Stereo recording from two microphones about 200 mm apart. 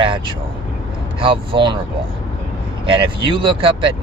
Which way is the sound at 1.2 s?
25° right (ahead or behind).